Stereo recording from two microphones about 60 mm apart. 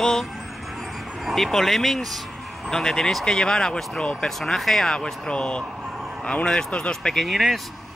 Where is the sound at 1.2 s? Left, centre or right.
Centre.